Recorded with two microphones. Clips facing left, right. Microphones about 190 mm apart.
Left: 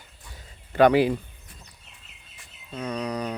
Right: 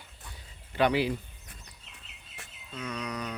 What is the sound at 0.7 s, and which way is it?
Speech, 50° left (ahead or behind).